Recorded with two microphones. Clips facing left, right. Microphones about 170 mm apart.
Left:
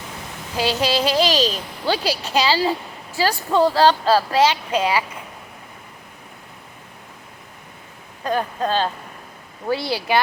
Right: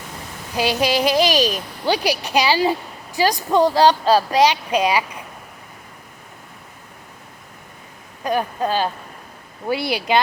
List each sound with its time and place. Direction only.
0.5 s a woman's voice: 15° right (ahead or behind)
8.2 s a woman's voice: 15° right (ahead or behind)